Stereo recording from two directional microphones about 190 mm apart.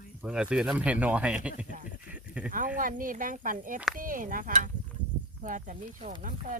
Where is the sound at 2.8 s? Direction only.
45° right (ahead or behind).